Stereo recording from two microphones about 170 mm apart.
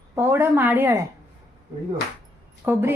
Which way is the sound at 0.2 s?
15° right (ahead or behind).